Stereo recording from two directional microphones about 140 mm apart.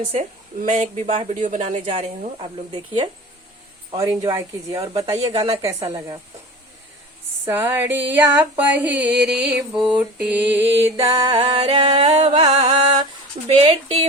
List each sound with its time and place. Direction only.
0.1 s speech: 55° right (ahead or behind)
2.7 s speech: 30° right (ahead or behind)
7.4 s a sound: 15° right (ahead or behind)
11.1 s speech: 40° right (ahead or behind)